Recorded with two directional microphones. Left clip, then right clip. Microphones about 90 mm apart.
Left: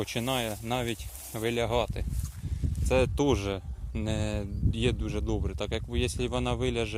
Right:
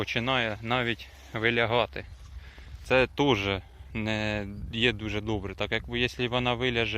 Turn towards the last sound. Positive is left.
turn(degrees=25)  # may be behind; listen again after turning